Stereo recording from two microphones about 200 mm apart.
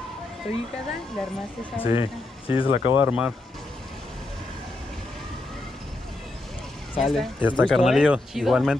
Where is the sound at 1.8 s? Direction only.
30° left (ahead or behind).